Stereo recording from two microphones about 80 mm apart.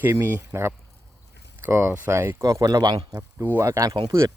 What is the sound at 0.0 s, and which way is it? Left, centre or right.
Speech, right.